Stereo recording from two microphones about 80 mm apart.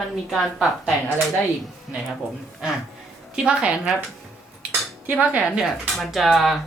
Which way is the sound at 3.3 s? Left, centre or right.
Centre.